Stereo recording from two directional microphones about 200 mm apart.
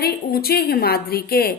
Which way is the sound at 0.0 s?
50° left (ahead or behind).